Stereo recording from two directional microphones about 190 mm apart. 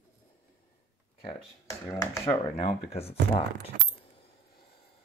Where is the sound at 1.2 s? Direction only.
20° left (ahead or behind).